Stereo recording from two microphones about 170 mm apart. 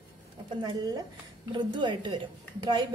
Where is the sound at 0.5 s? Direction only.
25° right (ahead or behind).